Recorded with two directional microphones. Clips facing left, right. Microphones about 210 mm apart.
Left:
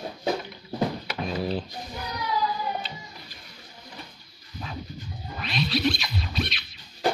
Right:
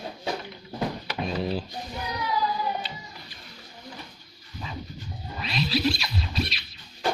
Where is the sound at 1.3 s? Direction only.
5° left (ahead or behind).